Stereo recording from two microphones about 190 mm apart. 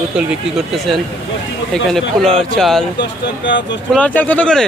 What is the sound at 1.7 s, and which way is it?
Speech, centre (ahead or behind).